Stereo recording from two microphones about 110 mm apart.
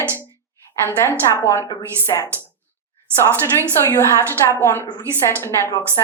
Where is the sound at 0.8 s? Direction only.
20° left (ahead or behind).